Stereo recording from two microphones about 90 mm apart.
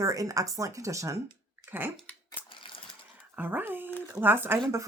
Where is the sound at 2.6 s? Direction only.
75° left (ahead or behind).